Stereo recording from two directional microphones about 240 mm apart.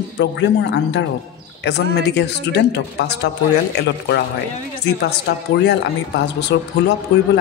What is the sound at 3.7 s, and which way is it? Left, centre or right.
Speech, left.